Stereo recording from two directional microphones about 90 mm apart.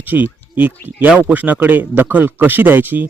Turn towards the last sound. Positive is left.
turn(degrees=-20)  # may be behind; listen again after turning